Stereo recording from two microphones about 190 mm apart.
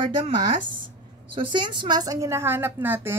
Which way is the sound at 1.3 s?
25° right (ahead or behind).